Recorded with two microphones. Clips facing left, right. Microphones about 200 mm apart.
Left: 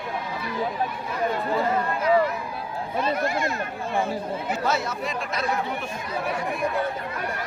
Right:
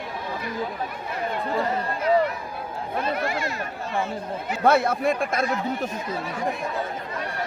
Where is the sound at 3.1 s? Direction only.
45° left (ahead or behind).